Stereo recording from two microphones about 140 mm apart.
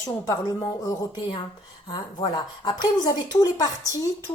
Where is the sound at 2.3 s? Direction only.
30° left (ahead or behind).